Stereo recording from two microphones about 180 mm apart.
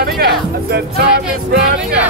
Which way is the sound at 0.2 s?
60° right (ahead or behind).